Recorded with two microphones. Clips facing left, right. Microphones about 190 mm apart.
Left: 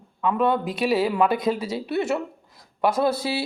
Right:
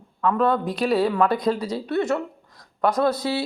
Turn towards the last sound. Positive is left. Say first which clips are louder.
# right 2 dB
turn(degrees=10)  # may be behind; listen again after turning